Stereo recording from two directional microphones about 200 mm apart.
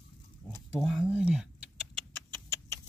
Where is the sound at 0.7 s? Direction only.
Centre (ahead or behind).